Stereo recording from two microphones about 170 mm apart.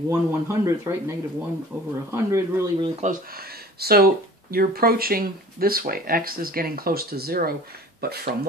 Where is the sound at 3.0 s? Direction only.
55° right (ahead or behind).